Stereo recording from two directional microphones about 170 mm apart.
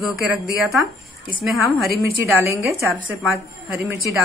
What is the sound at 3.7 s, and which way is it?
Speech, 20° right (ahead or behind).